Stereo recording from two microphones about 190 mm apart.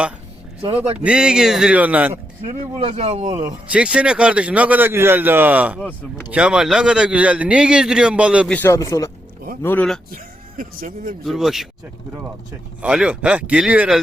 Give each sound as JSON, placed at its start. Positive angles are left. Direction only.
{"t": 0.9, "sound": "a man's voice", "side_deg": -5}
{"t": 2.7, "sound": "speech", "side_deg": -35}
{"t": 3.7, "sound": "a man's voice", "side_deg": -5}
{"t": 8.4, "sound": "speech", "side_deg": 10}
{"t": 10.6, "sound": "speech", "side_deg": -45}
{"t": 11.2, "sound": "a man's voice", "side_deg": 0}
{"t": 12.8, "sound": "a man's voice", "side_deg": -5}